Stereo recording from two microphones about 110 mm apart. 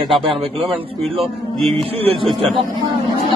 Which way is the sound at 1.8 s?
60° right (ahead or behind).